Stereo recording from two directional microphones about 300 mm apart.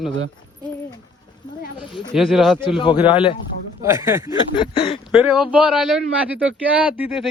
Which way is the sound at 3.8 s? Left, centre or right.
Centre.